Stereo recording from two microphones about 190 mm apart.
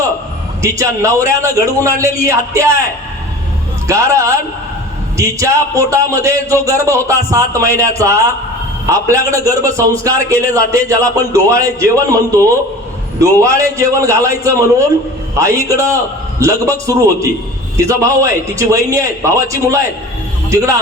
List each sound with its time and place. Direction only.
0.6 s a man's voice: 15° right (ahead or behind)
3.8 s a man's voice: 15° right (ahead or behind)